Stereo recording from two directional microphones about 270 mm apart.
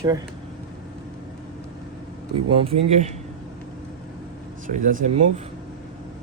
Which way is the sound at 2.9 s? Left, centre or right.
Right.